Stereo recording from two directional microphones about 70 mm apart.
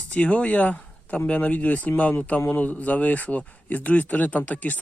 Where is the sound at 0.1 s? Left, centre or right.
Centre.